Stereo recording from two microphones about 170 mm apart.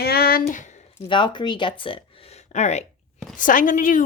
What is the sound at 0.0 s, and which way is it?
Speech, 65° left (ahead or behind).